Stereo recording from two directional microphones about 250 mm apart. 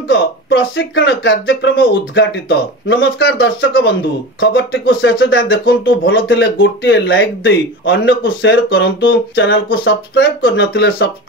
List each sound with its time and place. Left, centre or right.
0.1 s speech: left
2.9 s speech: left